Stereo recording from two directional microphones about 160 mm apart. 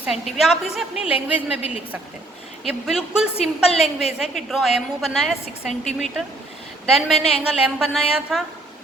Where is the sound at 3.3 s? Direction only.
40° left (ahead or behind).